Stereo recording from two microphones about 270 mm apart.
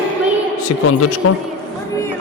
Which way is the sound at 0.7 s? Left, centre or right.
Left.